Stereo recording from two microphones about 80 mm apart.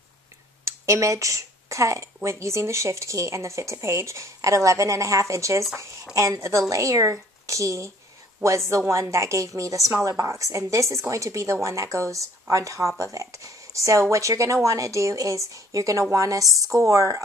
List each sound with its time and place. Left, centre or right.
0.7 s speech: right